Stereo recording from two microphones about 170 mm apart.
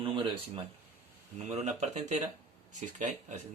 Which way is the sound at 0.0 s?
30° right (ahead or behind).